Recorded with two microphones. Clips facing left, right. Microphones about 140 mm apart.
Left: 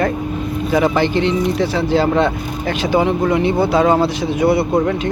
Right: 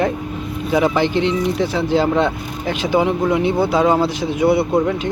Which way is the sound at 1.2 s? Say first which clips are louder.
Left 1 dB; 60° left (ahead or behind).